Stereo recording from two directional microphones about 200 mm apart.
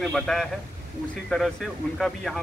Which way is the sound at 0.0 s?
Centre (ahead or behind).